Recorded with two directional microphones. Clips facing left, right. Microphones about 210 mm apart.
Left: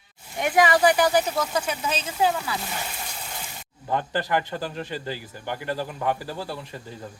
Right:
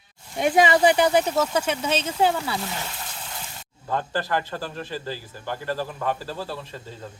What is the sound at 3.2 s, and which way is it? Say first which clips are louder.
Water: left 1 dB; 5° left (ahead or behind).